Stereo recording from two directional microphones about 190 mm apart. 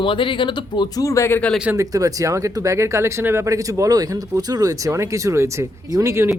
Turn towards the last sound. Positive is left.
turn(degrees=-15)  # may be behind; listen again after turning